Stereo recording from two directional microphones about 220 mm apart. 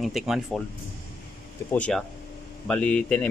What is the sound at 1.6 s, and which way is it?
Speech, 5° left (ahead or behind).